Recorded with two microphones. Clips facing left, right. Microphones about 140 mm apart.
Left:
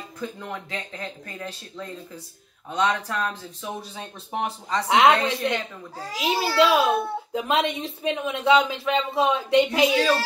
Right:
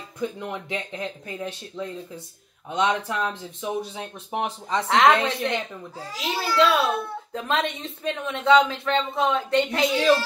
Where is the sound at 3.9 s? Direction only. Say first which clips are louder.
Right 1 dB; 10° right (ahead or behind).